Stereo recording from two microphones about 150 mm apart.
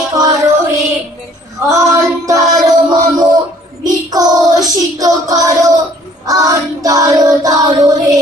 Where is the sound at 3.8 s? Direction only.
25° right (ahead or behind).